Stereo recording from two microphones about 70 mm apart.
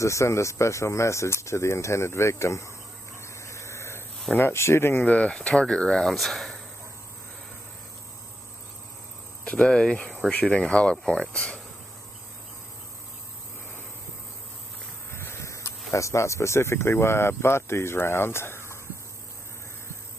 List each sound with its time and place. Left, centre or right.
0.0 s speech: left
3.2 s a sound: left
4.4 s speech: left
5.0 s speech: centre
9.4 s speech: centre
15.0 s speech: left